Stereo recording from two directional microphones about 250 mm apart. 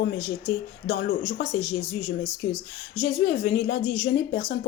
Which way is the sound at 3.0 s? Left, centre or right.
Left.